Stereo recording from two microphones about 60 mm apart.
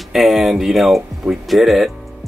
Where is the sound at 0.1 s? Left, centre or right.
Centre.